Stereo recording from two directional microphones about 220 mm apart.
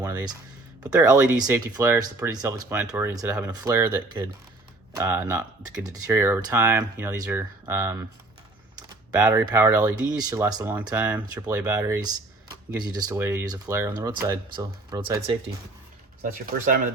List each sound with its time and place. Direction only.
0.0 s speech: 15° right (ahead or behind)
9.1 s speech: 15° right (ahead or behind)
16.2 s speech: 40° right (ahead or behind)